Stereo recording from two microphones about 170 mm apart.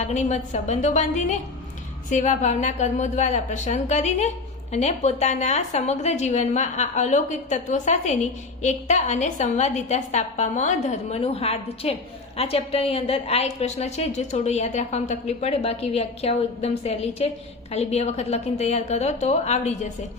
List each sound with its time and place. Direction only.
0.0 s a woman's voice: 45° left (ahead or behind)